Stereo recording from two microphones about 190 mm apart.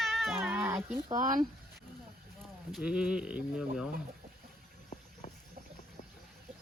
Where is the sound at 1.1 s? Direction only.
45° right (ahead or behind).